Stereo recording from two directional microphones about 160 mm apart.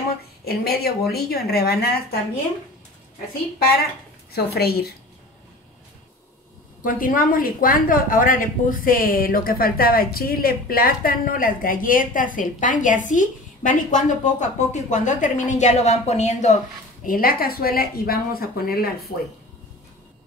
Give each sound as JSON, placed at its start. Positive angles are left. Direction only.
{"t": 0.5, "sound": "speech", "side_deg": 75}
{"t": 4.3, "sound": "speech", "side_deg": 75}
{"t": 6.8, "sound": "a woman's voice", "side_deg": 60}
{"t": 17.0, "sound": "speech", "side_deg": 65}